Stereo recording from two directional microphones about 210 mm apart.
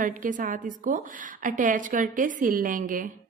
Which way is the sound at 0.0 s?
40° right (ahead or behind).